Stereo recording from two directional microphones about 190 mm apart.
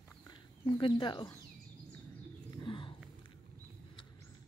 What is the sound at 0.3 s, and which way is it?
Speech, 25° left (ahead or behind).